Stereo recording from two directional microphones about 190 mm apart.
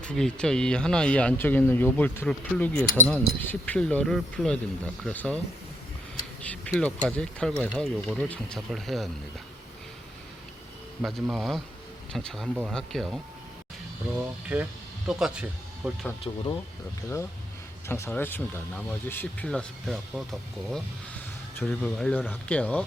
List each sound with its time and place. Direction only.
0.0 s speech: 5° left (ahead or behind)
6.4 s speech: 5° left (ahead or behind)
11.0 s speech: centre (ahead or behind)
14.5 s speech: 5° right (ahead or behind)
16.3 s speech: 20° left (ahead or behind)
17.8 s speech: 15° left (ahead or behind)